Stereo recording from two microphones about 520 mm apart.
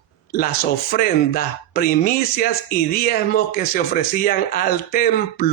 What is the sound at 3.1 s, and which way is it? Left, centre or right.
A man's voice, centre.